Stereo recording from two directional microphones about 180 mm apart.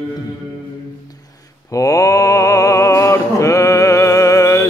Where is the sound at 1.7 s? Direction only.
20° left (ahead or behind).